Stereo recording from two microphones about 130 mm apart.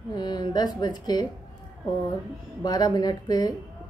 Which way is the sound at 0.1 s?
35° left (ahead or behind).